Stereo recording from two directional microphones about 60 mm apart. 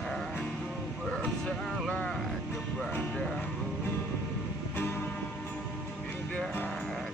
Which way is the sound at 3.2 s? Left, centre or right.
Centre.